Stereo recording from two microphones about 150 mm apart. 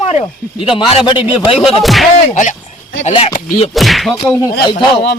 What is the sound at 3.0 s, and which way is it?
Speech, 40° left (ahead or behind).